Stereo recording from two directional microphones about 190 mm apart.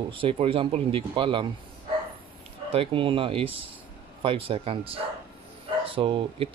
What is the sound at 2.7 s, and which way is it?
Speech, 30° right (ahead or behind).